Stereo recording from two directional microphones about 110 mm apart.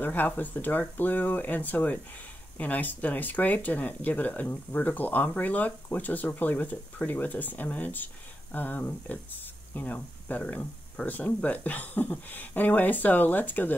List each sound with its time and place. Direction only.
0.0 s speech: 15° left (ahead or behind)